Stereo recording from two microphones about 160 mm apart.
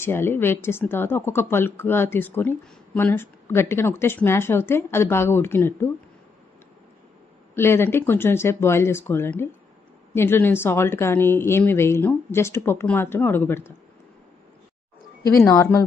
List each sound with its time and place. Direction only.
0.0 s speech: 15° left (ahead or behind)
7.5 s speech: 15° left (ahead or behind)
15.3 s speech: 20° left (ahead or behind)